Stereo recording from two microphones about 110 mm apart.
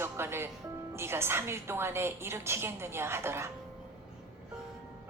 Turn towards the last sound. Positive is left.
turn(degrees=-25)  # may be behind; listen again after turning